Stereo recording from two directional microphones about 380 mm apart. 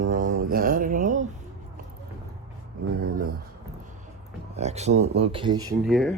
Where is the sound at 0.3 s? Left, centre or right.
Right.